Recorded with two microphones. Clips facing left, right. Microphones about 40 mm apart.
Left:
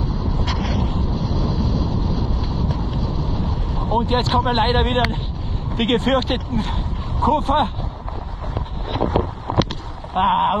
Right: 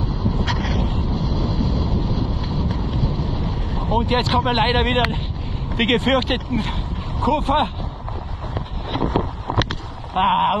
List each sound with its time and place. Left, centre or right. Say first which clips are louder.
0.0 s vehicle: right 1 dB; right
4.1 s speech: even; right
10.1 s a sound: even; right